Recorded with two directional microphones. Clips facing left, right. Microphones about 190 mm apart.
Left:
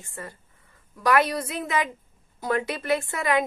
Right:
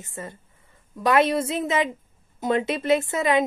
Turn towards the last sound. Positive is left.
turn(degrees=-20)  # may be behind; listen again after turning